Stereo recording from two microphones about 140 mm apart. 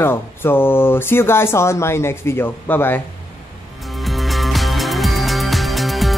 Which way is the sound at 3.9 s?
Centre (ahead or behind).